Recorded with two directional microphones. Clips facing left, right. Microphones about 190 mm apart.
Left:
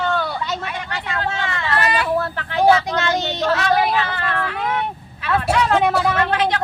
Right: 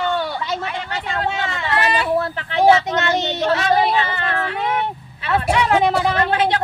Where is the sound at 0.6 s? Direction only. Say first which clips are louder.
Right 2 dB; 30° right (ahead or behind).